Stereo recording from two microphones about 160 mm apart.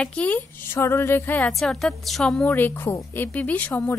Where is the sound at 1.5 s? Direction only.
Centre (ahead or behind).